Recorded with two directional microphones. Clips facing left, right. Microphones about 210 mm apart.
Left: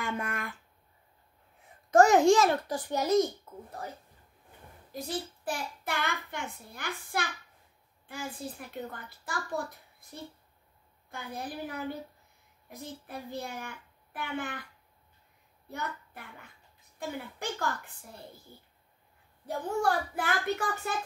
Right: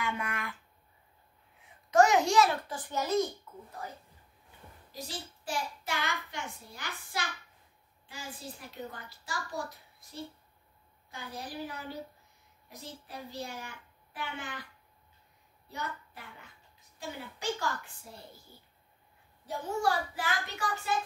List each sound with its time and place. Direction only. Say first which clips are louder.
0.0 s a sound: left 1 dB; 45° left (ahead or behind)
1.9 s a child's voice: left 4 dB; 50° left (ahead or behind)
3.5 s a sound: left 3 dB; 45° left (ahead or behind)
4.9 s a child's voice: left 7 dB; 55° left (ahead or behind)
15.7 s a child's voice: left 2 dB; 55° left (ahead or behind)
19.4 s a child's voice: left 2 dB; 55° left (ahead or behind)